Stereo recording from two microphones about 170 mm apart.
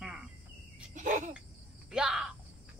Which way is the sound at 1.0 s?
45° right (ahead or behind).